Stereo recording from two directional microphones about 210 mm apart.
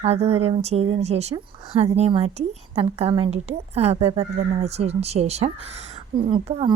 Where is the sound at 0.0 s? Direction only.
30° right (ahead or behind).